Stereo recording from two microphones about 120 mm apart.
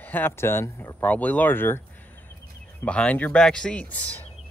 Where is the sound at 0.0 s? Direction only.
15° left (ahead or behind).